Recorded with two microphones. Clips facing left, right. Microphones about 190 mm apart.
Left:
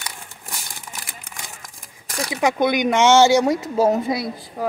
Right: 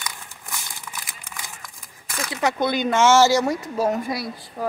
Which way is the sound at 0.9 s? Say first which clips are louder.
Left 1 dB; 45° left (ahead or behind).